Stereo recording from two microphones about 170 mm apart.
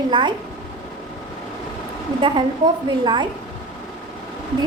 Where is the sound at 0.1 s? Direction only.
25° right (ahead or behind).